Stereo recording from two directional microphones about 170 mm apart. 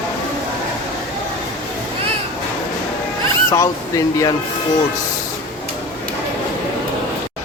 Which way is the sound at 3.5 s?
20° left (ahead or behind).